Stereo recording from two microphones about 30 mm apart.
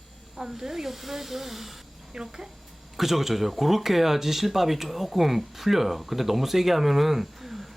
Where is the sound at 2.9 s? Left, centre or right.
Centre.